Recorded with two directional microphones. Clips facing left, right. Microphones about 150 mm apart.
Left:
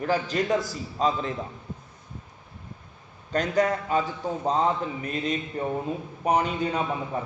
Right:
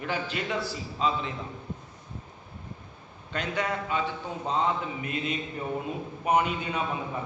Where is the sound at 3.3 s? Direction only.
40° left (ahead or behind).